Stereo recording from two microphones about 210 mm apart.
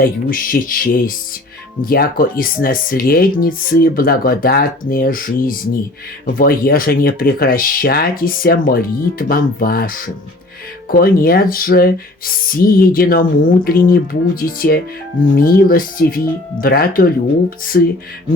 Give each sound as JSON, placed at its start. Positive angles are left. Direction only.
{"t": 0.0, "sound": "speech", "side_deg": 40}